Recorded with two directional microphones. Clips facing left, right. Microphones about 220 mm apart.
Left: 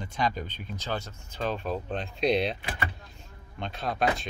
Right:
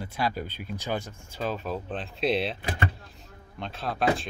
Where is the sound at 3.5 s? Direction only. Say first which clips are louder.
Left 1 dB; centre (ahead or behind).